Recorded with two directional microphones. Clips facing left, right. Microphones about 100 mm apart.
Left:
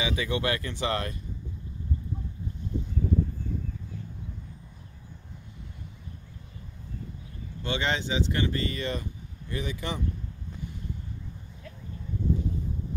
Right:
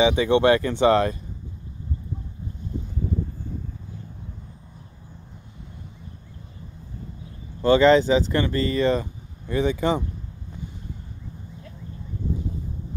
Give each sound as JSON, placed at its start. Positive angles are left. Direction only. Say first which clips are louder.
{"t": 0.0, "sound": "speech", "louder": "right 11 dB", "side_deg": -30}
{"t": 7.6, "sound": "speech", "louder": "right 14 dB", "side_deg": -40}